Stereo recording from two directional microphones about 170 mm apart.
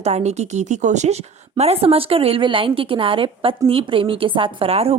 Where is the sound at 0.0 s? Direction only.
40° right (ahead or behind).